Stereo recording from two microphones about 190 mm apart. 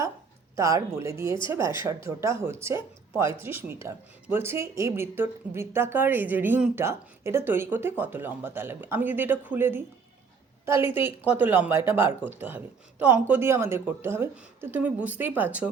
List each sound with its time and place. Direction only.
0.5 s a woman's voice: 15° right (ahead or behind)